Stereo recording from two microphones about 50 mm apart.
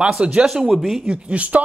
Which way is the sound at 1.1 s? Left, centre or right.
Right.